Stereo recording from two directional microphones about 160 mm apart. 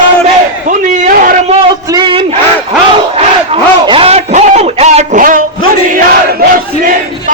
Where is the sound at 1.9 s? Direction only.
30° right (ahead or behind).